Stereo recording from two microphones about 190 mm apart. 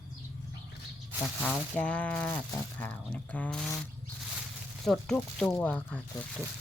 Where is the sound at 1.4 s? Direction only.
5° left (ahead or behind).